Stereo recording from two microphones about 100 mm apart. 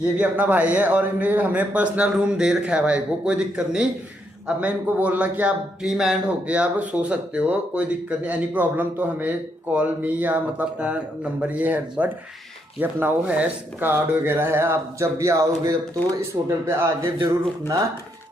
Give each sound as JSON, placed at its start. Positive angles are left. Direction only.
{"t": 0.2, "sound": "speech", "side_deg": -15}
{"t": 5.8, "sound": "speech", "side_deg": -5}